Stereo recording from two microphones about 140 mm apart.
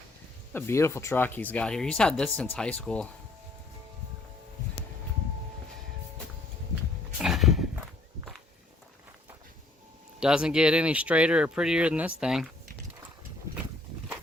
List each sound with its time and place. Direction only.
0.5 s speech: 20° left (ahead or behind)
7.2 s horse: centre (ahead or behind)
10.2 s speech: 5° right (ahead or behind)